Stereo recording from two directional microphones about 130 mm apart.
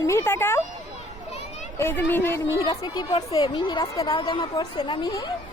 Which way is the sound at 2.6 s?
30° left (ahead or behind).